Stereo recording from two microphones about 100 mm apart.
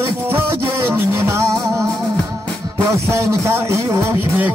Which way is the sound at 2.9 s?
30° right (ahead or behind).